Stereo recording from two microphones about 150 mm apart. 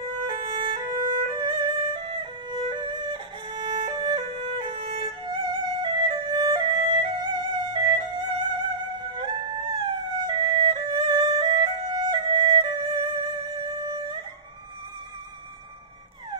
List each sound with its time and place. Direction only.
0.3 s music: 35° right (ahead or behind)